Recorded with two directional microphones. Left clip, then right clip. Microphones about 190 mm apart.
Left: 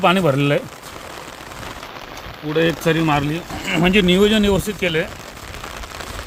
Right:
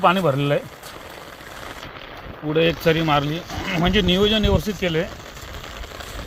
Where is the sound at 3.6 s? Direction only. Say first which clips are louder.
Left 4 dB; 30° left (ahead or behind).